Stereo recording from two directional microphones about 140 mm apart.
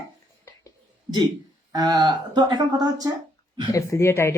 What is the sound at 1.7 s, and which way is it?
Speech, 30° right (ahead or behind).